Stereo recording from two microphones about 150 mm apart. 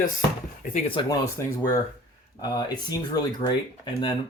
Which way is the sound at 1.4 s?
20° left (ahead or behind).